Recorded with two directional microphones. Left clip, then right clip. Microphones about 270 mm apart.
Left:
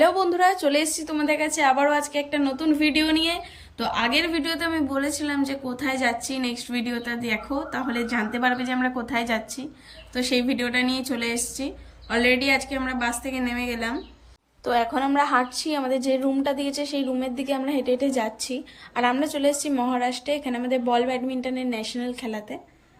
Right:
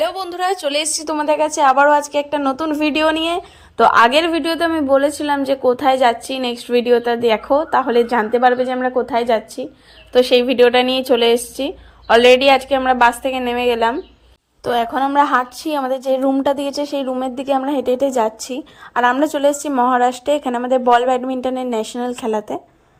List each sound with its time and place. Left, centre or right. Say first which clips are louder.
0.0 s a woman's voice: left 1 dB; right; by 13.9 s centre
14.6 s a woman's voice: right 6 dB; right